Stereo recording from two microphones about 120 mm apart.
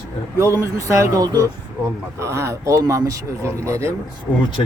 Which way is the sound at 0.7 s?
25° right (ahead or behind).